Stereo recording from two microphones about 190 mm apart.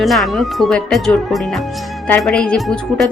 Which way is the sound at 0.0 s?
Centre (ahead or behind).